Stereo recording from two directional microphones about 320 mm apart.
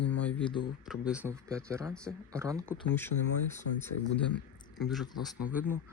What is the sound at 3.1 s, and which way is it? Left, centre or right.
Speech, left.